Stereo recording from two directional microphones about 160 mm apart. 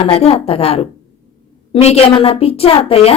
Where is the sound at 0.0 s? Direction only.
35° left (ahead or behind).